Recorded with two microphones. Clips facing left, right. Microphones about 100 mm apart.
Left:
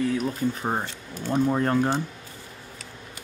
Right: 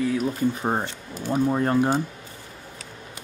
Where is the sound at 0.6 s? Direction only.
15° right (ahead or behind).